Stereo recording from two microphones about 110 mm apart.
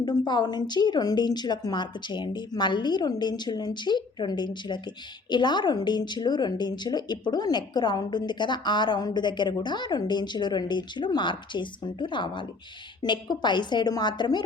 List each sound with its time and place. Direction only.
0.0 s a woman's voice: 40° left (ahead or behind)